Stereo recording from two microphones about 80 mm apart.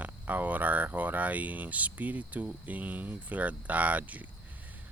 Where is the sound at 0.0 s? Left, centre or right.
Centre.